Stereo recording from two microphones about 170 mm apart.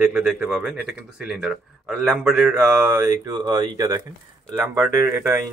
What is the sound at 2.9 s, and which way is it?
Speech, 20° right (ahead or behind).